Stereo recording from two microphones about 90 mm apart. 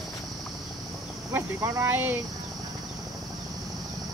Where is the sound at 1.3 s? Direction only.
30° right (ahead or behind).